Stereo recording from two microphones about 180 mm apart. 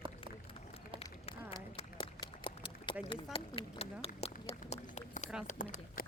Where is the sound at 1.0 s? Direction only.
35° left (ahead or behind).